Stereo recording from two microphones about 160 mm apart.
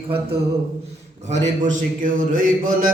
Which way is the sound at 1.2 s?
45° right (ahead or behind).